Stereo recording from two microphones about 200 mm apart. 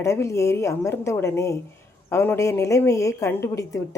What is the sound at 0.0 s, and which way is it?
Speech, 15° left (ahead or behind).